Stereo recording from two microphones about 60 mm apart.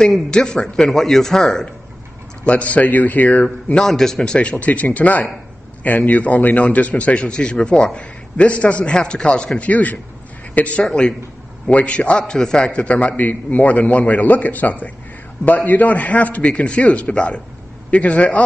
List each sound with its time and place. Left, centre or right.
0.0 s a man's voice: centre
2.4 s a man's voice: left
3.8 s a man's voice: centre